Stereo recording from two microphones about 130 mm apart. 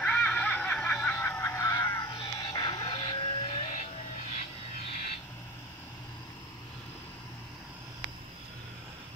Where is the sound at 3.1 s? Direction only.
40° left (ahead or behind).